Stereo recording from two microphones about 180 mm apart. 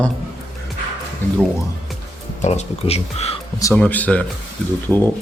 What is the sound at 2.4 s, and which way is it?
Speech, 35° left (ahead or behind).